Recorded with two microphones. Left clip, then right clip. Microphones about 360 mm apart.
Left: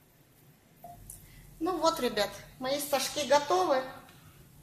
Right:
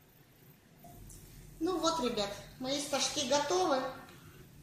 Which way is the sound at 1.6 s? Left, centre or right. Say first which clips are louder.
Left 4 dB; left.